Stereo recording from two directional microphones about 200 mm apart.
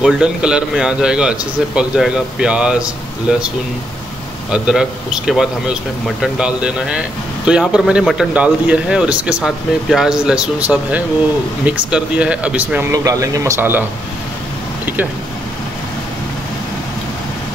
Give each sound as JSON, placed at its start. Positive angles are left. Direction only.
{"t": 0.0, "sound": "speech", "side_deg": -5}
{"t": 12.9, "sound": "speech", "side_deg": -15}